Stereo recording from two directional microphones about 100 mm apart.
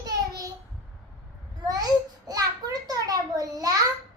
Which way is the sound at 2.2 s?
40° right (ahead or behind).